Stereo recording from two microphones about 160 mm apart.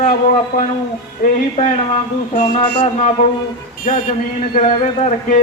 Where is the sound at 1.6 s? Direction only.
50° left (ahead or behind).